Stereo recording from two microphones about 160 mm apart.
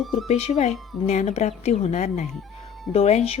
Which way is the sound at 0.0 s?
Centre (ahead or behind).